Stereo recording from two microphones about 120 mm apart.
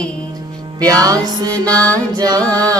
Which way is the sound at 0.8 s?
30° right (ahead or behind).